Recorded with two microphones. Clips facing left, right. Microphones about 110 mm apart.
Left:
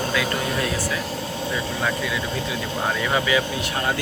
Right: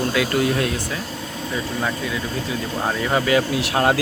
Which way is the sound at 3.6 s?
80° right.